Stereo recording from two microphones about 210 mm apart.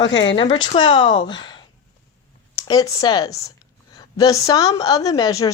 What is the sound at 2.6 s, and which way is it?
Speech, 15° left (ahead or behind).